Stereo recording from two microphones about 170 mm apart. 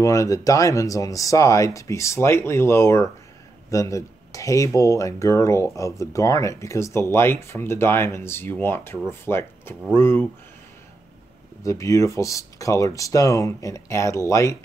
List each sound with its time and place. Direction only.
0.0 s speech: 20° left (ahead or behind)
11.6 s speech: 20° left (ahead or behind)